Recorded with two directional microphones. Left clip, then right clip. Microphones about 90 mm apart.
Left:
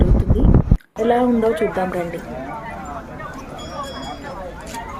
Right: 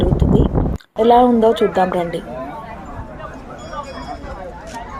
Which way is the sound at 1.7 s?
20° right (ahead or behind).